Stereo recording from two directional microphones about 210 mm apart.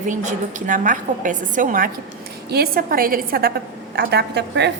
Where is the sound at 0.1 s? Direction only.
35° right (ahead or behind).